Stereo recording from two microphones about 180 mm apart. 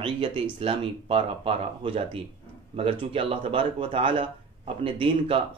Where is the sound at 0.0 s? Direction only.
30° right (ahead or behind).